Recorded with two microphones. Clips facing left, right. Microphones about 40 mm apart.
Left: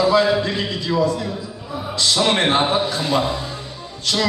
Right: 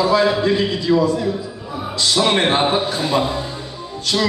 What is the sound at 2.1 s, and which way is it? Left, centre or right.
Speech, centre.